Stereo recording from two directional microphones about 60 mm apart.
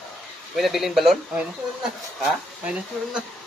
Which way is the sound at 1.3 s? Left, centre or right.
Centre.